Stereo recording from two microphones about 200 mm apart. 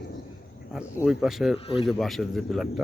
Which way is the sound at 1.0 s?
Centre (ahead or behind).